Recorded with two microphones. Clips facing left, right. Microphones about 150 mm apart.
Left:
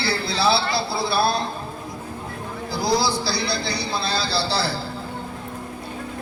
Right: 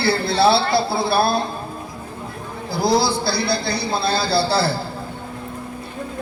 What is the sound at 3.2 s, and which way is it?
A man's voice, 55° right (ahead or behind).